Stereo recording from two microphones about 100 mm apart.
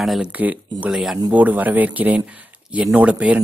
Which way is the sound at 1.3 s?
15° right (ahead or behind).